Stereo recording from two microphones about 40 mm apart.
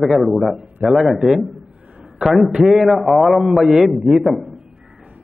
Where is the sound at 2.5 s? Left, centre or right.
Centre.